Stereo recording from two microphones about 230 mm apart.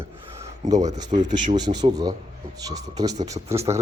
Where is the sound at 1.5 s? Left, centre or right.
Centre.